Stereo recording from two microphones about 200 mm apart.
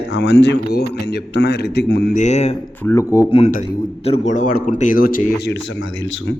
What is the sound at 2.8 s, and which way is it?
Speech, 15° left (ahead or behind).